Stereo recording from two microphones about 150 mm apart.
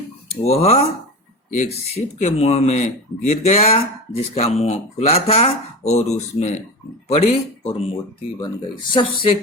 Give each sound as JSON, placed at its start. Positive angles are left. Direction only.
{"t": 0.3, "sound": "speech", "side_deg": 45}
{"t": 2.1, "sound": "speech", "side_deg": 45}
{"t": 8.9, "sound": "speech", "side_deg": 35}